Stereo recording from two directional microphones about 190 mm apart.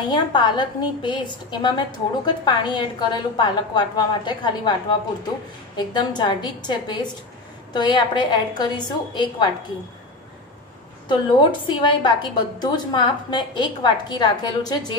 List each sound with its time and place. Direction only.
0.1 s a woman's voice: 25° left (ahead or behind)
11.6 s a woman's voice: 25° left (ahead or behind)